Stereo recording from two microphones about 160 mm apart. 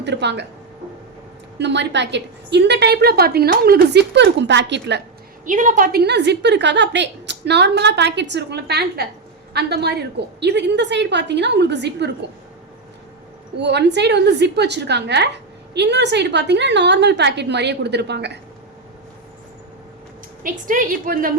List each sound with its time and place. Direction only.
0.0 s a woman's voice: 90° right
1.5 s a woman's voice: 90° right
5.5 s a woman's voice: 55° right (ahead or behind); by 12.1 s 90° right
13.6 s a woman's voice: 90° right
20.4 s a woman's voice: 60° right (ahead or behind)